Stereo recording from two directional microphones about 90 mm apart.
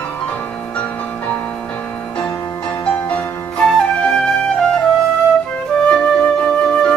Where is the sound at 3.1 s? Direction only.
10° left (ahead or behind).